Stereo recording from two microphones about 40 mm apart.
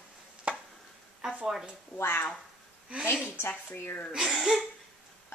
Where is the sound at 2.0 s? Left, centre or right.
Left.